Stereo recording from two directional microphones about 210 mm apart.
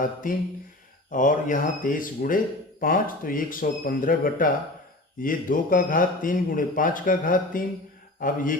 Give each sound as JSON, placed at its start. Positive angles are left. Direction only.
{"t": 0.0, "sound": "speech", "side_deg": 40}